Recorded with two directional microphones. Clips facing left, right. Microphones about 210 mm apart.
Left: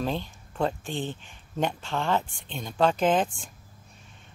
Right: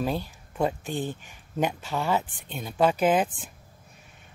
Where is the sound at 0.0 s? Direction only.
10° right (ahead or behind).